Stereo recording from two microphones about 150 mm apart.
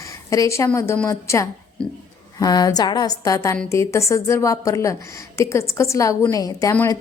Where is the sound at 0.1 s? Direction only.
20° left (ahead or behind).